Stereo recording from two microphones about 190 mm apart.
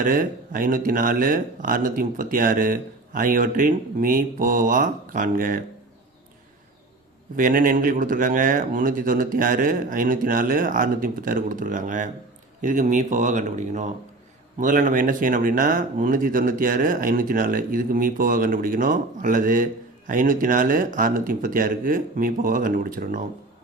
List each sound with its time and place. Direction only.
0.0 s speech: 45° right (ahead or behind)
7.3 s speech: 45° right (ahead or behind)